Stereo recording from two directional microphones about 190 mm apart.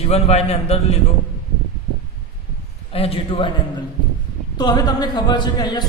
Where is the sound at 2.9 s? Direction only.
30° left (ahead or behind).